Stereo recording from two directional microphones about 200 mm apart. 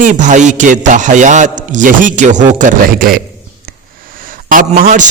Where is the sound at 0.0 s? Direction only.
40° right (ahead or behind).